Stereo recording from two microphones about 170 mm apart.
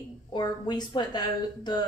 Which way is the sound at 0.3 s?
25° left (ahead or behind).